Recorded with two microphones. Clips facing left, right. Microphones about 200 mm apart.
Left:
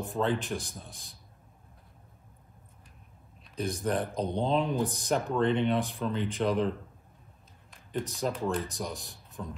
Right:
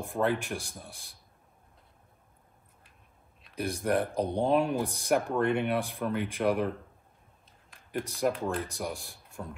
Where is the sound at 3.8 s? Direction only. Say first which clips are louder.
Right 3 dB; 15° right (ahead or behind).